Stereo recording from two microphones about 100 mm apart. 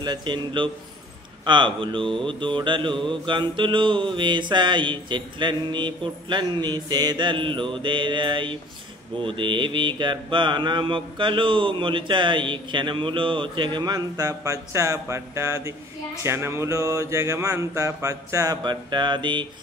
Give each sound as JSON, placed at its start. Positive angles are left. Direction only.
{"t": 0.0, "sound": "mantra", "side_deg": -50}
{"t": 1.4, "sound": "speech", "side_deg": -55}
{"t": 2.2, "sound": "mantra", "side_deg": -55}
{"t": 18.6, "sound": "mantra", "side_deg": -50}